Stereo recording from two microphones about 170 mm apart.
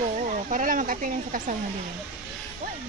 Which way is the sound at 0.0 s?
50° right (ahead or behind).